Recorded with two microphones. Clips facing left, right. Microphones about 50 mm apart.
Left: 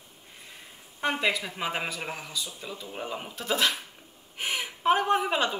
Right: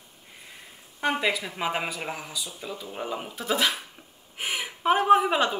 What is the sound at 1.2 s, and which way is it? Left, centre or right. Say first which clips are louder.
Speech: right 1 dB; centre.